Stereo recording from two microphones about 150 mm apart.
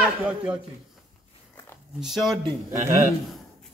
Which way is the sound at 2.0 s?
Centre (ahead or behind).